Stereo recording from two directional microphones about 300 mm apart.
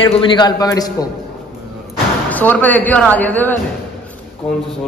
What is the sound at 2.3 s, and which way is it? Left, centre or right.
A man's voice, centre.